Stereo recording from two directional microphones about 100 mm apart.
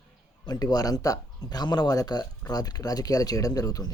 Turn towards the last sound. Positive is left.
turn(degrees=40)  # may be behind; listen again after turning